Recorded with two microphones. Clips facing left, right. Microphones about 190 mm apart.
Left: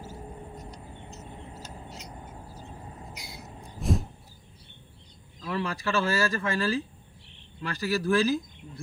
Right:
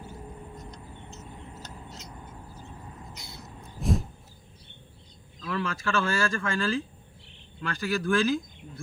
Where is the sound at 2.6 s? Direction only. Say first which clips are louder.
Left 1 dB; 30° left (ahead or behind).